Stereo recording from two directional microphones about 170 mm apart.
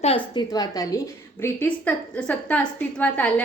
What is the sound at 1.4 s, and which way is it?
A woman's voice, 10° left (ahead or behind).